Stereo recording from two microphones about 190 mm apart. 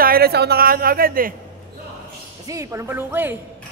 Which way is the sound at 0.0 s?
55° right (ahead or behind).